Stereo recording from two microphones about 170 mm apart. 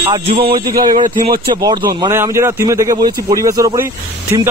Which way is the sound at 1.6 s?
20° right (ahead or behind).